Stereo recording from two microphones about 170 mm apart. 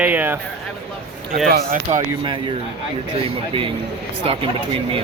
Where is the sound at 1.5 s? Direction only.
65° right (ahead or behind).